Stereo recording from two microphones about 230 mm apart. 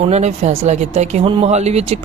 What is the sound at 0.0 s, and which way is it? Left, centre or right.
A woman's voice, right.